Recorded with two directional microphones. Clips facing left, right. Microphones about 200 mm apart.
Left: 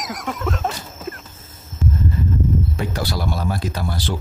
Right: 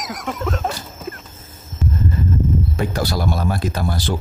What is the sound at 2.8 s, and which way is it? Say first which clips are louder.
Speech: right 3 dB; 45° right (ahead or behind).